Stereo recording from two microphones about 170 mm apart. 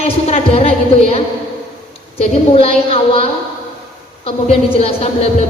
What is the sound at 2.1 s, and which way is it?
A woman's voice, 35° left (ahead or behind).